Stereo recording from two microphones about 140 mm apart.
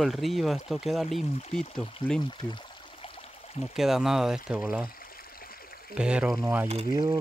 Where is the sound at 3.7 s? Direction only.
5° right (ahead or behind).